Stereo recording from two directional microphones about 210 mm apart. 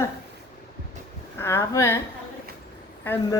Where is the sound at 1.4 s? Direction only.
10° left (ahead or behind).